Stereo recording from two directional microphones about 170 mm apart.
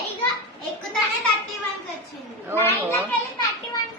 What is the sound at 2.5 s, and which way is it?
Speech, 15° left (ahead or behind).